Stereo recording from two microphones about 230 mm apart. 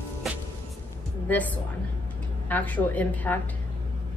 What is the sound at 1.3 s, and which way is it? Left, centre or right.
A woman's voice, centre.